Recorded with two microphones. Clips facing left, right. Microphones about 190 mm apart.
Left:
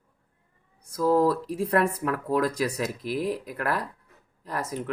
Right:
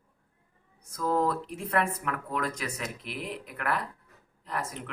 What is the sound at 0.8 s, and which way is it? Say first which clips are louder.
Speech: left 6 dB; 30° left (ahead or behind).